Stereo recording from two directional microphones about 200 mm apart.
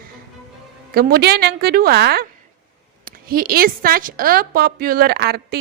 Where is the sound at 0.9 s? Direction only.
50° right (ahead or behind).